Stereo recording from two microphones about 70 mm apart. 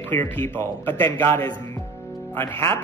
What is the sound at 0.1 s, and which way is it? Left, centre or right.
A man's voice, left.